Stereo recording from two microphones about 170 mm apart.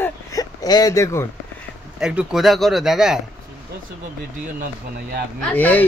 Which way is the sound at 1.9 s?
5° right (ahead or behind).